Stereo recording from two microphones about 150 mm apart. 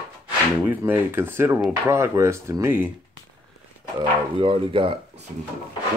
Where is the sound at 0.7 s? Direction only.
10° right (ahead or behind).